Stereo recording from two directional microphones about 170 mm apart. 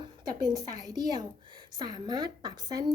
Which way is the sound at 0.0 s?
25° right (ahead or behind).